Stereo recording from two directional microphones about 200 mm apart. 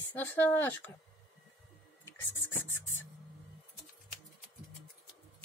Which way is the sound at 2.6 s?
85° left.